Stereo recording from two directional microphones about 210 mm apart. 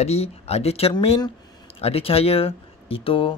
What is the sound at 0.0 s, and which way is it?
Speech, 30° left (ahead or behind).